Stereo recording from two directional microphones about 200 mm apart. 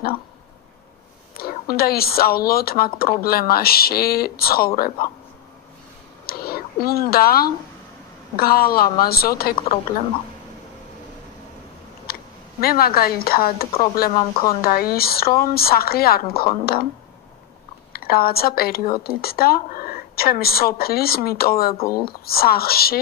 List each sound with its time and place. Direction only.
1.4 s a woman's voice: 50° left (ahead or behind)
6.2 s a sound: 50° left (ahead or behind)
8.4 s a woman's voice: 50° left (ahead or behind)
12.1 s speech: 50° left (ahead or behind)
14.1 s speech: 30° left (ahead or behind)
14.6 s a woman's voice: 50° left (ahead or behind)
17.9 s a woman's voice: 50° left (ahead or behind)